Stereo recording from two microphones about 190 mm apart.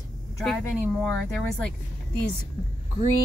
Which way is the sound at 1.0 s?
5° left (ahead or behind).